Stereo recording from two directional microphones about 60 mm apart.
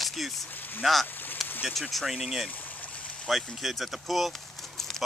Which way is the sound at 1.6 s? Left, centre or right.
Centre.